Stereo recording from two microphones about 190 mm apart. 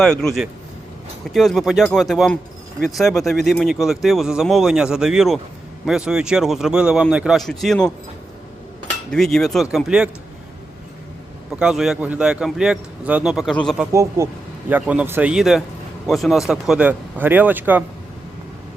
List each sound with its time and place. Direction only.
0.0 s speech: 5° left (ahead or behind)
9.1 s speech: 5° left (ahead or behind)
11.6 s speech: centre (ahead or behind)
13.9 s speech: 15° right (ahead or behind)